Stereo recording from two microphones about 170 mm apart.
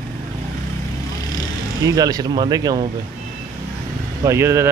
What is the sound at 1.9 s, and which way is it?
Speech, 20° right (ahead or behind).